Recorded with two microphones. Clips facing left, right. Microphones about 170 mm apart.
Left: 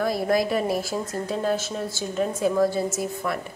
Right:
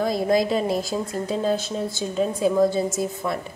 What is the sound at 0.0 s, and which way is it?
A woman's voice, 20° right (ahead or behind).